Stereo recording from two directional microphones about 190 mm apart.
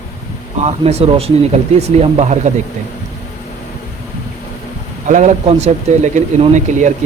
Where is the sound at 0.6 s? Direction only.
30° right (ahead or behind).